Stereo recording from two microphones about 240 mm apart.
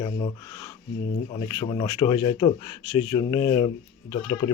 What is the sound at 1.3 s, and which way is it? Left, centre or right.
Speech, centre.